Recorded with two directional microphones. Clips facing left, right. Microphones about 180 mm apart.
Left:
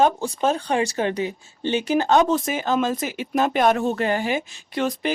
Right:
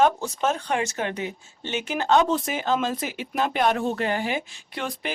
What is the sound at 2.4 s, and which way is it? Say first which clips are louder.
Speech: left 3 dB; 45° left (ahead or behind).